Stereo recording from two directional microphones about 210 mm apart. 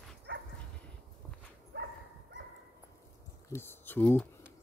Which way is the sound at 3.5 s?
10° left (ahead or behind).